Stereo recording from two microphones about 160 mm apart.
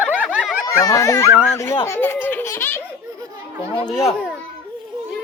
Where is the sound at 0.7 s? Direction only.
20° left (ahead or behind).